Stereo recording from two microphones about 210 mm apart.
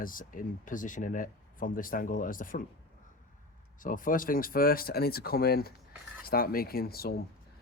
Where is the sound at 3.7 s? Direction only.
40° left (ahead or behind).